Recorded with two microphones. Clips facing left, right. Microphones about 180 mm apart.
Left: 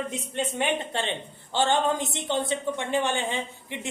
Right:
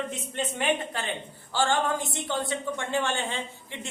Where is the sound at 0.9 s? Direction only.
25° left (ahead or behind).